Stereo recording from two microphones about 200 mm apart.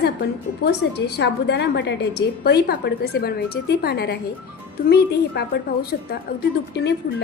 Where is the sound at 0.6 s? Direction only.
55° left (ahead or behind).